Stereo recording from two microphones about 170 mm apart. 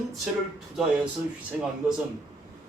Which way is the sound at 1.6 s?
5° right (ahead or behind).